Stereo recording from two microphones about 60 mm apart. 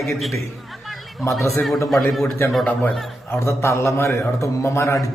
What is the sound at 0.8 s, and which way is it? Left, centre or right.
Chatter, centre.